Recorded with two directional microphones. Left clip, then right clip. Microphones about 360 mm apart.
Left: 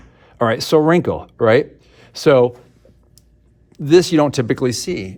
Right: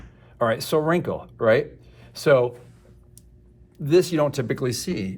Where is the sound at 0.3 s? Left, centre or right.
Left.